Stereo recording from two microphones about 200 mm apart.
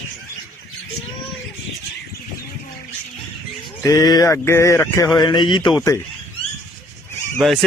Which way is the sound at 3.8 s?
15° left (ahead or behind).